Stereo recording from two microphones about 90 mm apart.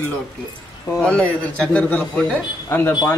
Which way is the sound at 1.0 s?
10° left (ahead or behind).